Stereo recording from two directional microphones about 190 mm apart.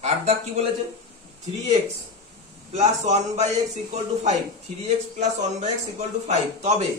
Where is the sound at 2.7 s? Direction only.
35° right (ahead or behind).